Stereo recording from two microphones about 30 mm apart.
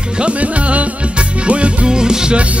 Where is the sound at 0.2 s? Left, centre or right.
Right.